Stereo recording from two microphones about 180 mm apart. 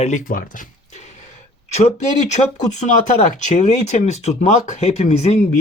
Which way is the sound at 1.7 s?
40° left (ahead or behind).